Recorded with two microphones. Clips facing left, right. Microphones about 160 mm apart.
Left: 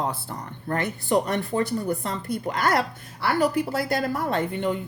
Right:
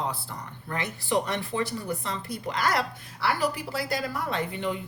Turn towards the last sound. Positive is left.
turn(degrees=50)  # may be behind; listen again after turning